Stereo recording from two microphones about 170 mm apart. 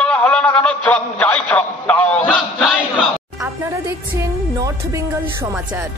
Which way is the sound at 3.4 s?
15° right (ahead or behind).